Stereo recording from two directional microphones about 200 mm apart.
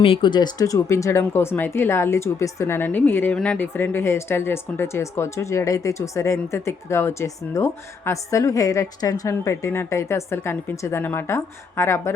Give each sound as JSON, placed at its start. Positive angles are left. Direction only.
{"t": 0.0, "sound": "speech", "side_deg": 25}